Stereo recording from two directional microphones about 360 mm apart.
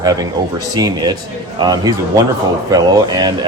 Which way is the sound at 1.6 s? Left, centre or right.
Centre.